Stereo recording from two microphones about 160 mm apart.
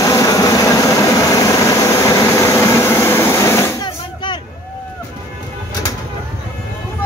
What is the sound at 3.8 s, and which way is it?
Drum, 30° left (ahead or behind).